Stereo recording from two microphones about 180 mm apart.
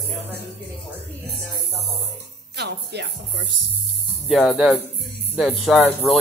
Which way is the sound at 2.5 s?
65° right (ahead or behind).